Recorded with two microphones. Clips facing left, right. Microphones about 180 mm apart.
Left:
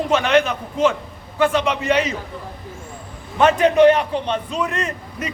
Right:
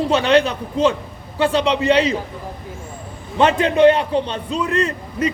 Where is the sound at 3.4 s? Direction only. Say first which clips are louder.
Left 1 dB; 30° right (ahead or behind).